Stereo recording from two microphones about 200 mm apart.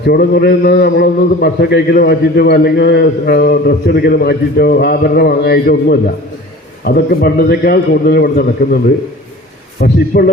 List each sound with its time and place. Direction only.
0.0 s a man's voice: 50° left (ahead or behind)
9.8 s a man's voice: 45° left (ahead or behind)